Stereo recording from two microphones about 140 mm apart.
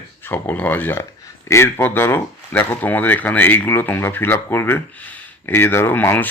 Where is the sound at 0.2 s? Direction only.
15° left (ahead or behind).